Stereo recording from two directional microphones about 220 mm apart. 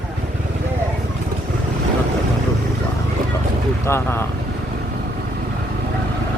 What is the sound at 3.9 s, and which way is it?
Speech, 10° left (ahead or behind).